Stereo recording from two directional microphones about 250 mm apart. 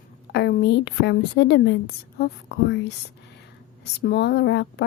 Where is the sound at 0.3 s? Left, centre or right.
Left.